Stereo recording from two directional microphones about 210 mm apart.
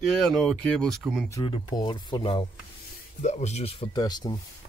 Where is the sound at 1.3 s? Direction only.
20° left (ahead or behind).